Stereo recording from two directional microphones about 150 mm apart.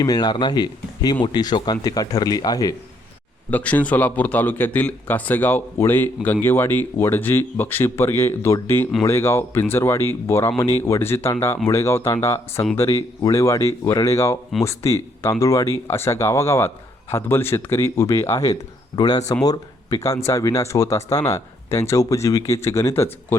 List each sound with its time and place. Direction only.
0.0 s speech: 25° left (ahead or behind)
3.5 s speech: 10° left (ahead or behind)